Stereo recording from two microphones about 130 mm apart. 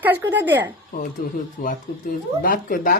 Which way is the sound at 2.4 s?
90° left.